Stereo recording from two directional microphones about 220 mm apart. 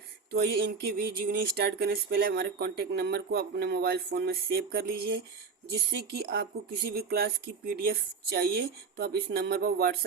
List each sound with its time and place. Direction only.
0.3 s speech: 45° right (ahead or behind)